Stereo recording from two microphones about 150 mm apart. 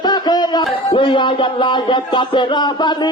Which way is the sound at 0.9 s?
35° left (ahead or behind).